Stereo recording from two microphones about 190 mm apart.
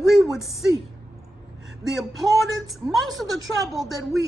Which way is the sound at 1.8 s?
Centre (ahead or behind).